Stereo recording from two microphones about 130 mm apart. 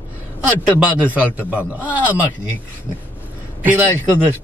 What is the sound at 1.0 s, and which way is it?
Speech, 15° right (ahead or behind).